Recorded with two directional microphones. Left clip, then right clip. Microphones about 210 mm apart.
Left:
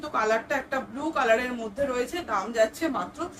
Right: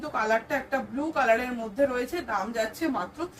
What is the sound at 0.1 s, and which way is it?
Speech, 5° left (ahead or behind).